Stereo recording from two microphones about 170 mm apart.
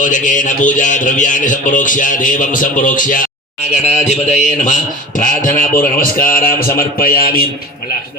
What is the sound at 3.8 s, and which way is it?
A man's voice, 40° left (ahead or behind).